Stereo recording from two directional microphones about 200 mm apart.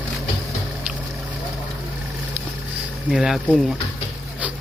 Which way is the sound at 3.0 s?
Centre (ahead or behind).